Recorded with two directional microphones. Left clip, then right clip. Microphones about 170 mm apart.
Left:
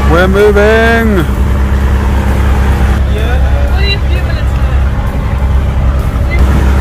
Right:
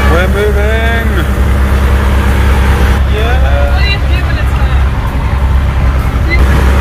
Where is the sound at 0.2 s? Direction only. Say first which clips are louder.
Left 6 dB; 45° left (ahead or behind).